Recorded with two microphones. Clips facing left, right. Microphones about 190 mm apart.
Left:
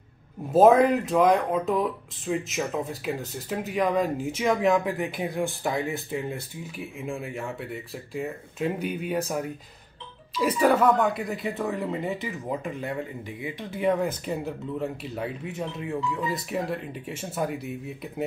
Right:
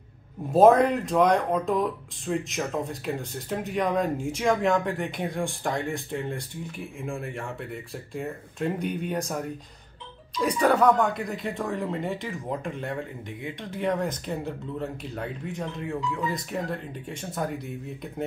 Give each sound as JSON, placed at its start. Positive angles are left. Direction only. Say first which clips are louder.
{"t": 0.5, "sound": "speech", "louder": "even", "side_deg": 0}